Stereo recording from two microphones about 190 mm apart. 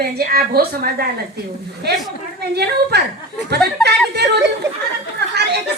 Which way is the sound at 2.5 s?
60° right (ahead or behind).